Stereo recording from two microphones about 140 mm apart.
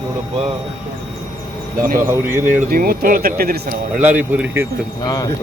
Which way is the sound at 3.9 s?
10° right (ahead or behind).